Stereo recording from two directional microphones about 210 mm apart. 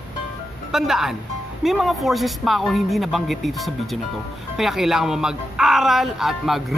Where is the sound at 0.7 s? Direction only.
Centre (ahead or behind).